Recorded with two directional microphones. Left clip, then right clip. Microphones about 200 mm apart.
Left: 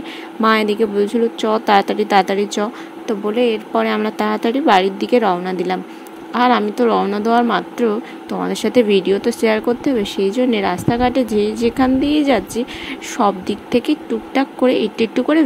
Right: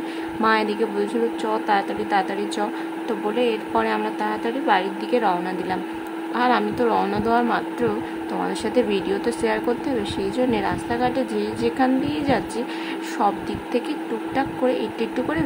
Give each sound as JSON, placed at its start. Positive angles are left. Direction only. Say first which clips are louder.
{"t": 0.4, "sound": "speech", "louder": "left 5 dB", "side_deg": 30}